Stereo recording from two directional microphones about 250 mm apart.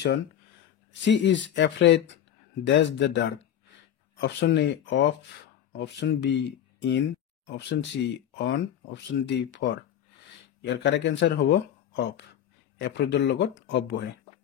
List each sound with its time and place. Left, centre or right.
1.0 s speech: left